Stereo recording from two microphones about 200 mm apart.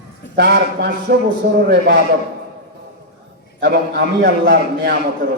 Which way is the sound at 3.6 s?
50° right (ahead or behind).